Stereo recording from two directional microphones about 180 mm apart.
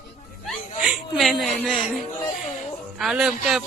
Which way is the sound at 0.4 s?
Centre (ahead or behind).